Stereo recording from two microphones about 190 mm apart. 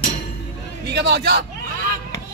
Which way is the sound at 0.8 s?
60° right (ahead or behind).